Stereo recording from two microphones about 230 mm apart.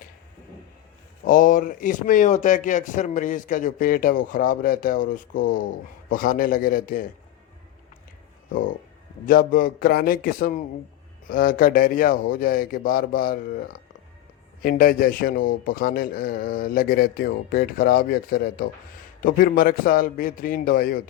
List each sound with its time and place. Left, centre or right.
1.2 s speech: left
9.2 s speech: left